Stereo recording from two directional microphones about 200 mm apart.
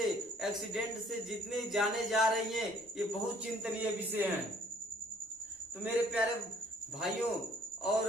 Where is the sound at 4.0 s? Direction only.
10° right (ahead or behind).